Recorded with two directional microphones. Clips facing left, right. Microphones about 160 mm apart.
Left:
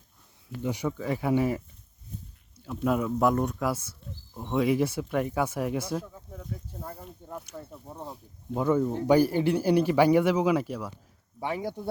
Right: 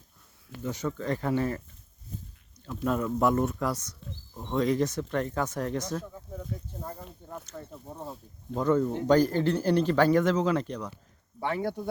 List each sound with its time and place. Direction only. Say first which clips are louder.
0.6 s speech: left 2 dB; 15° left (ahead or behind)
2.1 s a sound: right 1 dB; 90° right
2.6 s speech: left 2 dB; 10° left (ahead or behind)